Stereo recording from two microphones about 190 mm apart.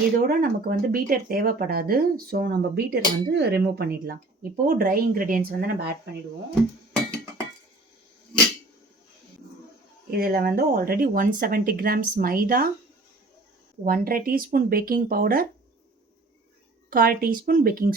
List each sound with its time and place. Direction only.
0.2 s speech: 50° right (ahead or behind)
10.1 s speech: 50° right (ahead or behind)
13.8 s speech: 50° right (ahead or behind)
16.9 s speech: 50° right (ahead or behind)